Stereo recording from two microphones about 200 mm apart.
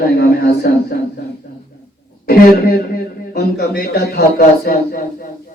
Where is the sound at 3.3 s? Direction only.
50° left (ahead or behind).